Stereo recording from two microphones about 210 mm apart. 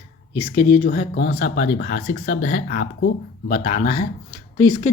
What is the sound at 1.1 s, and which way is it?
Speech, 60° left (ahead or behind).